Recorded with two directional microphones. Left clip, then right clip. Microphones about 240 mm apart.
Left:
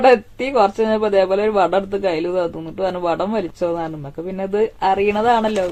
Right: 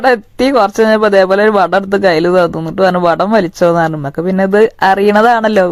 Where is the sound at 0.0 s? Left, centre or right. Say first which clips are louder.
Right 3 dB; right.